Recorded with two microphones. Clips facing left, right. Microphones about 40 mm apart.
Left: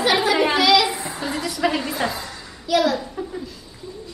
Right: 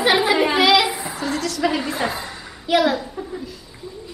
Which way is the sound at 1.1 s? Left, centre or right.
Centre.